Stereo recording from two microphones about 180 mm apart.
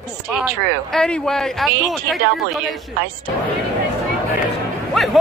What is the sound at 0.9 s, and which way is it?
A man's voice, 5° left (ahead or behind).